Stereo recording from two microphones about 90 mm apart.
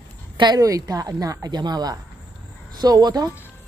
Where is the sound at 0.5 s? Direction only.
40° right (ahead or behind).